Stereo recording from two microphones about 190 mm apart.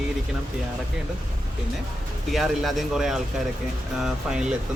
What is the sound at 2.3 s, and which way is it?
Speech, centre (ahead or behind).